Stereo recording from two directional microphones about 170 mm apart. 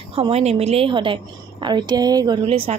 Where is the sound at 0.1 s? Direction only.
35° right (ahead or behind).